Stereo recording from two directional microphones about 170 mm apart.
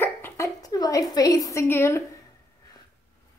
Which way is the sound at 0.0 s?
15° left (ahead or behind).